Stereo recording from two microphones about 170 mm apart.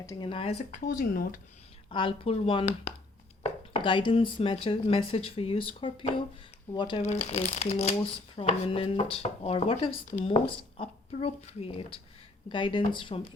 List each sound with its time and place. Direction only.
0.0 s speech: 20° left (ahead or behind)
0.3 s speech: 30° left (ahead or behind)
0.7 s speech: 55° left (ahead or behind)
1.9 s speech: 30° left (ahead or behind)
7.0 s speech: 40° left (ahead or behind)